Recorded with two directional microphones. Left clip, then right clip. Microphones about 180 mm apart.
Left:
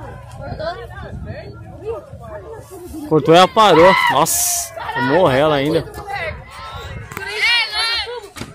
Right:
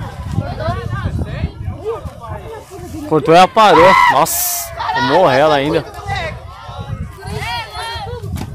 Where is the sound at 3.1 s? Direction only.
Centre (ahead or behind).